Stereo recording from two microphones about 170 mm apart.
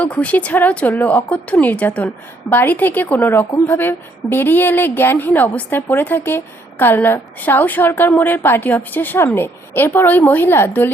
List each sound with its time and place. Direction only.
0.0 s a woman's voice: 10° left (ahead or behind)